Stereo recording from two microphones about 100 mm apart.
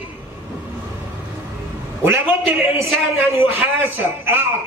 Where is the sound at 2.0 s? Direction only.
25° right (ahead or behind).